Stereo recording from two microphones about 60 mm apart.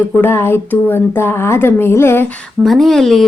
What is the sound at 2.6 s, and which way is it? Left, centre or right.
Speech, centre.